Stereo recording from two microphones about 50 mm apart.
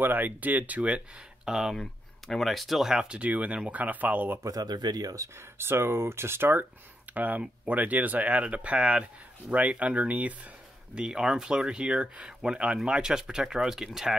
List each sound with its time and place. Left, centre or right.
0.0 s speech: right
1.4 s speech: centre
1.8 s speech: centre
3.1 s speech: right
5.2 s speech: right
5.6 s speech: right
7.2 s speech: right
11.0 s speech: centre